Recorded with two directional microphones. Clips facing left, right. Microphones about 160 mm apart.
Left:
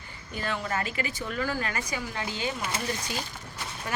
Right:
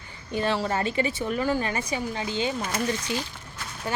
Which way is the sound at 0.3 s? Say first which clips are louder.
Right 6 dB; 30° right (ahead or behind).